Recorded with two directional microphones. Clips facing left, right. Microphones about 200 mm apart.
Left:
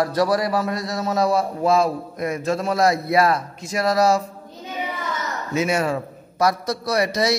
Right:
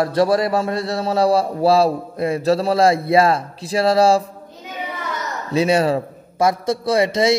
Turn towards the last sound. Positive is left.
turn(degrees=-25)  # may be behind; listen again after turning